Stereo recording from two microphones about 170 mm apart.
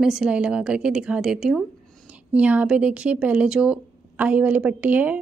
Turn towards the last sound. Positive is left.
turn(degrees=-10)  # may be behind; listen again after turning